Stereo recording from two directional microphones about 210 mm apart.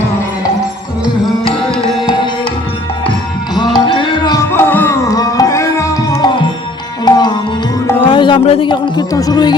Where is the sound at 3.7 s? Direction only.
25° left (ahead or behind).